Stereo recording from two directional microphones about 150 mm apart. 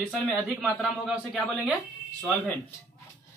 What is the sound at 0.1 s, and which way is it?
Speech, centre (ahead or behind).